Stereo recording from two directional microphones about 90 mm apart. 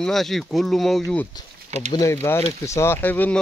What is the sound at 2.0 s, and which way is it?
Speech, 25° left (ahead or behind).